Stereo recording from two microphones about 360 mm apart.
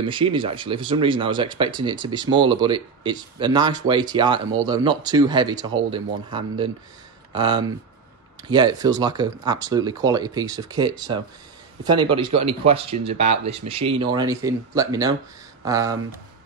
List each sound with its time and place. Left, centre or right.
0.0 s speech: centre